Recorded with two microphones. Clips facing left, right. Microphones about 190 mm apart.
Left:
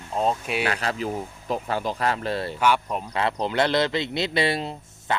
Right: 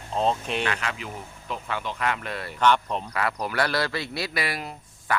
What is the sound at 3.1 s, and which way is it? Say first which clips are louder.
A man's voice: left 5 dB; 25° left (ahead or behind).